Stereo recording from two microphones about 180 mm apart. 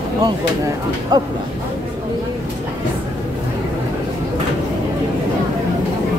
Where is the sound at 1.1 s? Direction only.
20° right (ahead or behind).